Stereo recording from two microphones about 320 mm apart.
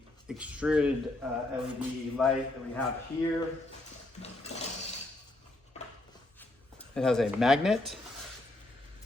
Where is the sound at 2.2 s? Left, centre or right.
Centre.